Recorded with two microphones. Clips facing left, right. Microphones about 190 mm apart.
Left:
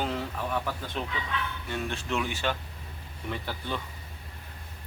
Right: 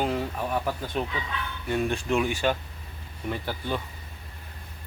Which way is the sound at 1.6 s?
15° right (ahead or behind).